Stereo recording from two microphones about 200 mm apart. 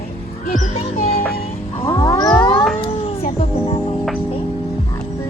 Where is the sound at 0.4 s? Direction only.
40° left (ahead or behind).